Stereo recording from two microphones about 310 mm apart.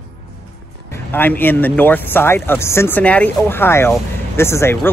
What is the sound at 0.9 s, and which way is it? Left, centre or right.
Speech, centre.